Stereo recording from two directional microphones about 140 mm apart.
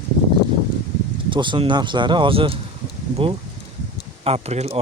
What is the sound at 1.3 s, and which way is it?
Speech, 35° right (ahead or behind).